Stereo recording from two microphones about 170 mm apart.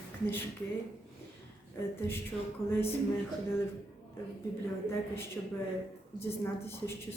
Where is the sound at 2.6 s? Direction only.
35° left (ahead or behind).